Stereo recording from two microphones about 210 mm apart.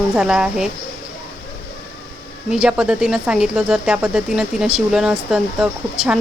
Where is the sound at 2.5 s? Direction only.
5° right (ahead or behind).